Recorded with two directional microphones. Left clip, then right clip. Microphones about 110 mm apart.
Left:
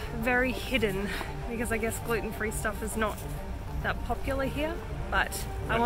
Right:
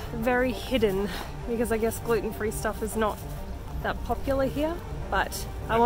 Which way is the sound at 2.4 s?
25° right (ahead or behind).